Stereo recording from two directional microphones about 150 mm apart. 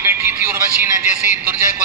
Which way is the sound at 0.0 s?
15° right (ahead or behind).